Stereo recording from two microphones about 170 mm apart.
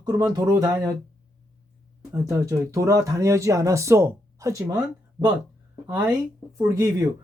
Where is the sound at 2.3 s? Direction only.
20° right (ahead or behind).